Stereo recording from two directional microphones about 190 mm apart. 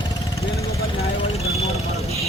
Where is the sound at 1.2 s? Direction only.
35° left (ahead or behind).